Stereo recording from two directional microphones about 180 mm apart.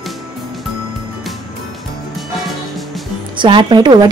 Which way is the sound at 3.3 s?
25° right (ahead or behind).